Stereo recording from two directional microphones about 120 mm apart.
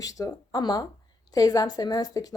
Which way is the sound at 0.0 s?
30° left (ahead or behind).